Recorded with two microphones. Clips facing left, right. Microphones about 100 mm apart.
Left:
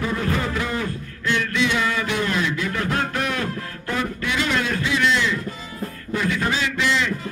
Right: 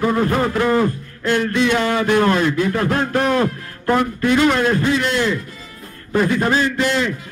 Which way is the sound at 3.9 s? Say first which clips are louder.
Right 9 dB; 50° right (ahead or behind).